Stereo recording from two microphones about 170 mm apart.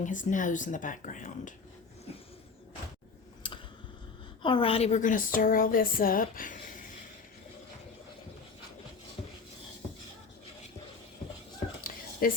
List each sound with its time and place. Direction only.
0.0 s a woman's voice: 50° left (ahead or behind)
3.4 s a sound: 30° left (ahead or behind)
4.4 s a woman's voice: 30° left (ahead or behind); by 6.6 s 55° left (ahead or behind)
12.2 s speech: 55° left (ahead or behind)